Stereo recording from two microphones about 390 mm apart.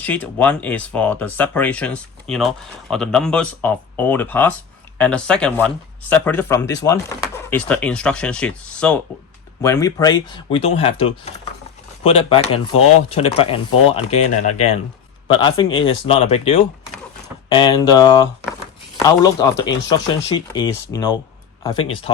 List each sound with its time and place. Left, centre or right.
0.0 s speech: centre